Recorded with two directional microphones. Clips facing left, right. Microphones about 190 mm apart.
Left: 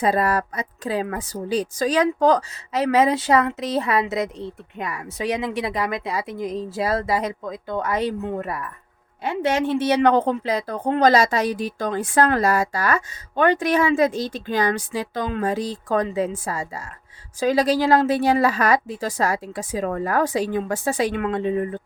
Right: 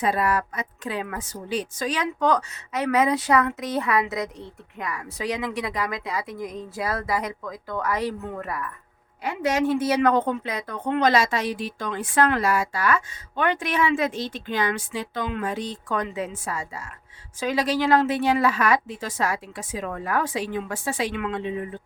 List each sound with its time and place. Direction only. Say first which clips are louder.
0.0 s a woman's voice: left 3 dB; 35° left (ahead or behind)